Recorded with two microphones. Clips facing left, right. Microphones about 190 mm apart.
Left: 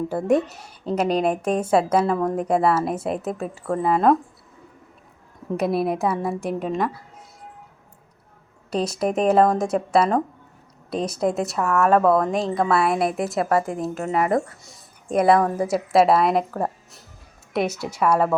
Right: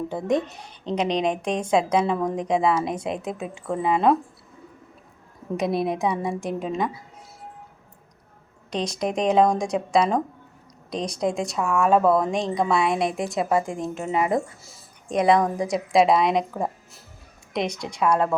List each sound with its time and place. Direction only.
0.1 s a woman's voice: 10° left (ahead or behind)
5.5 s speech: 5° left (ahead or behind)
8.7 s speech: 5° left (ahead or behind)
13.4 s speech: 20° right (ahead or behind)
13.7 s speech: 5° left (ahead or behind)